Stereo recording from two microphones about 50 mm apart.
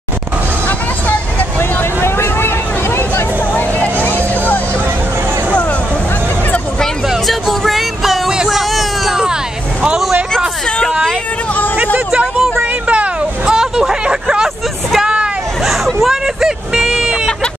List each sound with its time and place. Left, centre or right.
1.6 s vehicle: left
3.5 s music: left
7.1 s music: centre
8.5 s hubbub: centre
11.7 s a sound: right
13.6 s hubbub: centre